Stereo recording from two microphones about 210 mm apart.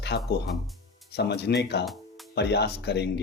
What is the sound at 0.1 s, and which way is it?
A man's voice, 50° left (ahead or behind).